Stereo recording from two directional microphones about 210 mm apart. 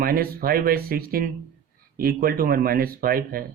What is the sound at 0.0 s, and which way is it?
Speech, 45° right (ahead or behind).